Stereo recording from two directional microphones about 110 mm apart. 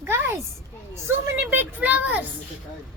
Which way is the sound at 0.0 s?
20° right (ahead or behind).